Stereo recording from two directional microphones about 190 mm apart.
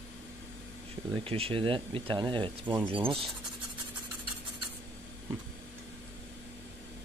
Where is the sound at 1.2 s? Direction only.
30° right (ahead or behind).